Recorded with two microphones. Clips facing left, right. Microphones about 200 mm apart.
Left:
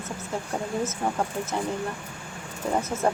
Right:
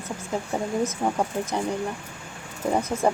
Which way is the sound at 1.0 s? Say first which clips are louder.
Right 2 dB; 10° right (ahead or behind).